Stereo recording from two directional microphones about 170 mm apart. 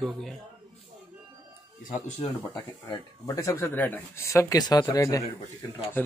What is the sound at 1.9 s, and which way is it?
Speech, 25° left (ahead or behind).